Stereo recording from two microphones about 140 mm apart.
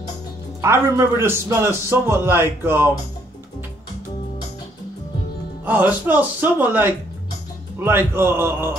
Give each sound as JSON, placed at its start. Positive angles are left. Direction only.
{"t": 0.6, "sound": "a man's voice", "side_deg": -20}
{"t": 5.7, "sound": "a man's voice", "side_deg": -10}